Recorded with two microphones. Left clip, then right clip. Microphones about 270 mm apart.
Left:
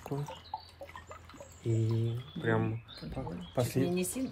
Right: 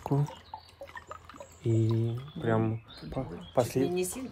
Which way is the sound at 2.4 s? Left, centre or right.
Right.